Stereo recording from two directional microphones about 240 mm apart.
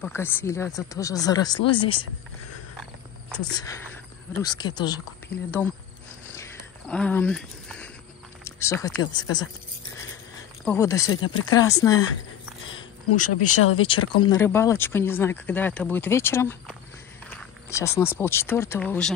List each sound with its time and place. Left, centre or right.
0.0 s speech: centre
4.4 s speech: centre
6.3 s a sound: centre
8.5 s speech: centre
10.6 s speech: centre
11.1 s speech: left
11.5 s speech: centre
13.1 s speech: left
13.9 s speech: left
14.4 s speech: centre